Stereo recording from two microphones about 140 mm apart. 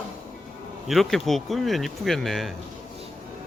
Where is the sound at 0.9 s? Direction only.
Centre (ahead or behind).